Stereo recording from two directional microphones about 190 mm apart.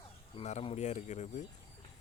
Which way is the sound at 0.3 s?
35° left (ahead or behind).